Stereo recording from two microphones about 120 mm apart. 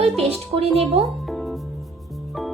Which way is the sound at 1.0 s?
Centre (ahead or behind).